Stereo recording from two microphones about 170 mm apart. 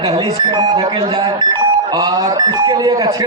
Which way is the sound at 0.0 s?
20° right (ahead or behind).